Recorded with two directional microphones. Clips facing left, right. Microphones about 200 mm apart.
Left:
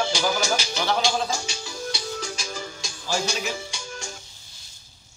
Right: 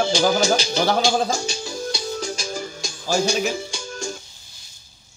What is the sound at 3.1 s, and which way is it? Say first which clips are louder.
Speech: right 7 dB; 50° right (ahead or behind).